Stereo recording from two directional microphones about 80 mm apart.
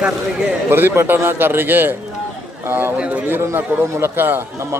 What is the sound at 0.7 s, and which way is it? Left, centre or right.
A man's voice, right.